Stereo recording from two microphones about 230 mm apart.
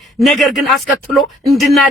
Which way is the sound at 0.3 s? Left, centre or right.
Centre.